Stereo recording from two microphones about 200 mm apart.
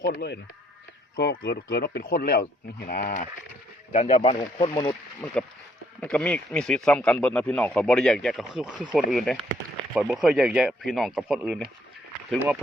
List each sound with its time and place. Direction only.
0.0 s speech: 55° left (ahead or behind); by 4.4 s 30° left (ahead or behind)
4.7 s speech: 15° left (ahead or behind); by 11.6 s 5° right (ahead or behind)